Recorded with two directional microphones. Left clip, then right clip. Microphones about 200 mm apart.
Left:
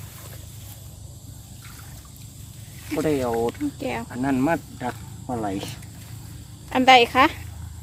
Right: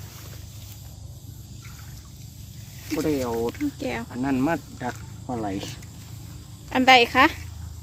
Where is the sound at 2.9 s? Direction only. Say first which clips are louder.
Left 2 dB; 30° left (ahead or behind).